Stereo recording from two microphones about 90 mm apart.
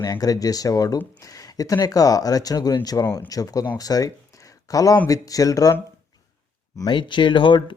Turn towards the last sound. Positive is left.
turn(degrees=65)  # may be behind; listen again after turning